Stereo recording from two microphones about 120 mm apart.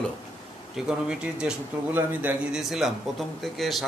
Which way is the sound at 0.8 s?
5° right (ahead or behind).